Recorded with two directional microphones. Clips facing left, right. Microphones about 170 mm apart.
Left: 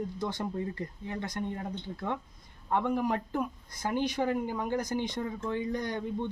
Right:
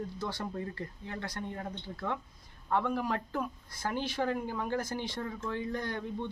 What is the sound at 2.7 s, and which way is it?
Speech, 15° left (ahead or behind).